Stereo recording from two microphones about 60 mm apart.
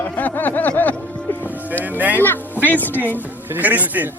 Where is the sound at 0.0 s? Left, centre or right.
Left.